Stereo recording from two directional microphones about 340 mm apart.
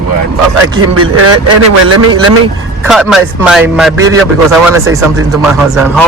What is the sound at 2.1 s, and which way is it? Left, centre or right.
Speech, centre.